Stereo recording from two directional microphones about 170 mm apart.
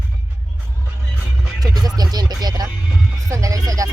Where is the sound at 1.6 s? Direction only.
20° right (ahead or behind).